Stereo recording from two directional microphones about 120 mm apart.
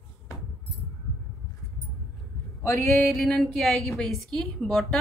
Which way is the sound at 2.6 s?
25° left (ahead or behind).